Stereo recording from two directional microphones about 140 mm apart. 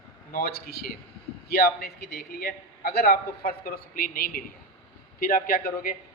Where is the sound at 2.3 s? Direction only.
90° left.